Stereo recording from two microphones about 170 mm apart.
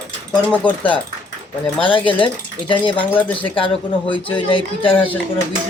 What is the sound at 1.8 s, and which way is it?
Speech, 30° left (ahead or behind).